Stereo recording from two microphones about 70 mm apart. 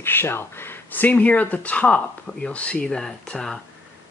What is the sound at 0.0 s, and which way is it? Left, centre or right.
Speech, left.